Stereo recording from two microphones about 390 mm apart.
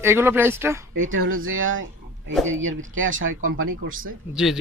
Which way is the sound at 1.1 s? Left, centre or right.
Right.